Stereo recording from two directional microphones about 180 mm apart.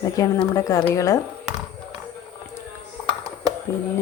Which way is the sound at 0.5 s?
15° left (ahead or behind).